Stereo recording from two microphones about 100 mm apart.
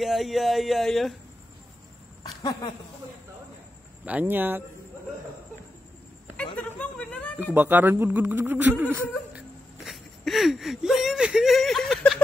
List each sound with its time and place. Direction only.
0.0 s speech: centre (ahead or behind)
2.2 s speech: 50° left (ahead or behind)
4.0 s speech: 15° right (ahead or behind)
6.3 s a sound: 15° left (ahead or behind)
7.5 s speech: 20° right (ahead or behind)
9.8 s speech: centre (ahead or behind)